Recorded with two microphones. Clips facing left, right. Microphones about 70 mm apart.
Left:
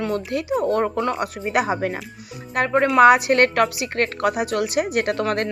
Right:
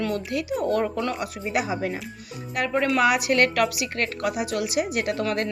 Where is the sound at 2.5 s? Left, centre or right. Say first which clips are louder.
Left 6 dB; left.